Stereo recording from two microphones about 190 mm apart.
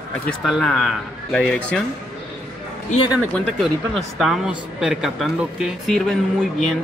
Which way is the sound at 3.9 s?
Centre (ahead or behind).